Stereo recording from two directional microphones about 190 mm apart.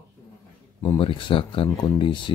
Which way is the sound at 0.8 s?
25° left (ahead or behind).